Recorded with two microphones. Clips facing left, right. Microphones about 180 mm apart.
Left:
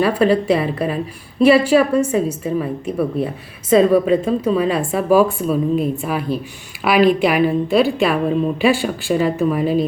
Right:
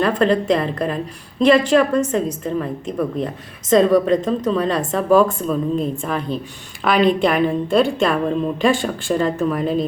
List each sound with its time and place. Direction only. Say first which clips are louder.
0.0 s a woman's voice: left 2 dB; 5° left (ahead or behind)